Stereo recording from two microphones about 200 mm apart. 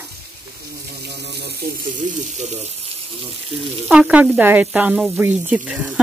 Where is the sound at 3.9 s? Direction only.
5° right (ahead or behind).